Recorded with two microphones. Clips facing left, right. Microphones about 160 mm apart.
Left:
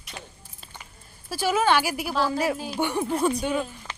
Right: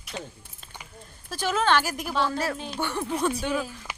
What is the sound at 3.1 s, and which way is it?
Speech, centre (ahead or behind).